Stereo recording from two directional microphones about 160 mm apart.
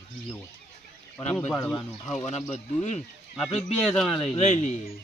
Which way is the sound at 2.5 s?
45° left (ahead or behind).